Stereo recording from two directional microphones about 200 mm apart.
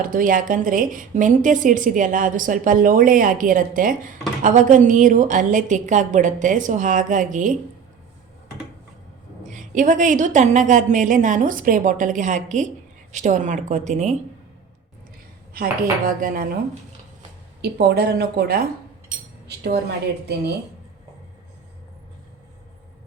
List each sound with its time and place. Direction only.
0.0 s a woman's voice: 45° right (ahead or behind)
9.5 s a woman's voice: 40° right (ahead or behind)
15.5 s a woman's voice: 45° right (ahead or behind)
17.6 s a woman's voice: 55° right (ahead or behind)